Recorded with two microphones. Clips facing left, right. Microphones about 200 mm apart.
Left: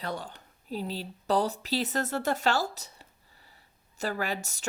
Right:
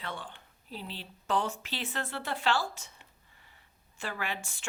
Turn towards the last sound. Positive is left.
turn(degrees=40)  # may be behind; listen again after turning